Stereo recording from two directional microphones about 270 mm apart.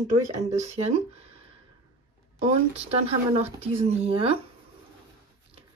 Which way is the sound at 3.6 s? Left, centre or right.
Right.